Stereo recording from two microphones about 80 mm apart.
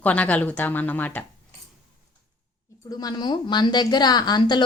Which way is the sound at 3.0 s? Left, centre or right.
Left.